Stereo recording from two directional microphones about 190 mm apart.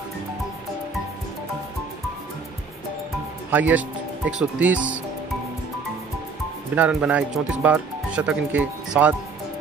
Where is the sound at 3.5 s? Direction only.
10° right (ahead or behind).